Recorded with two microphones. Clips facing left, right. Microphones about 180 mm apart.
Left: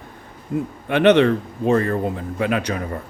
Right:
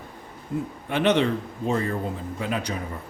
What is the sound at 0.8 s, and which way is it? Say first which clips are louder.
Speech: left 7 dB; 65° left (ahead or behind).